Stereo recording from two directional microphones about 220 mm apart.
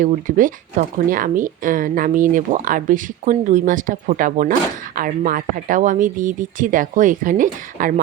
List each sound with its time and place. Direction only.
0.0 s speech: 35° right (ahead or behind)